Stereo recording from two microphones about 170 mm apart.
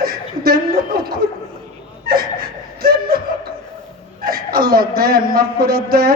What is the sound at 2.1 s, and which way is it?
Chuckle, 60° right (ahead or behind).